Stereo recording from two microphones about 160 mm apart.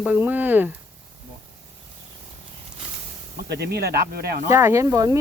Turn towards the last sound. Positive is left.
turn(degrees=-20)  # may be behind; listen again after turning